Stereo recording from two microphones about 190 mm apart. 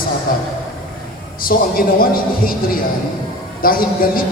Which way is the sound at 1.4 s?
50° left (ahead or behind).